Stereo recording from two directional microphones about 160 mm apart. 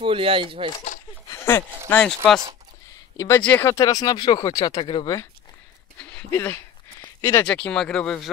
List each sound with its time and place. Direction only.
0.0 s speech: 35° right (ahead or behind)
1.3 s a sound: 15° left (ahead or behind)
1.9 s speech: 10° left (ahead or behind)
3.2 s speech: 15° left (ahead or behind)
5.9 s a sound: 10° left (ahead or behind)
7.4 s speech: 5° left (ahead or behind)